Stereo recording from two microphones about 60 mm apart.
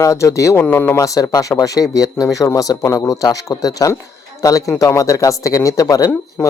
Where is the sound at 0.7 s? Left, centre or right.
Left.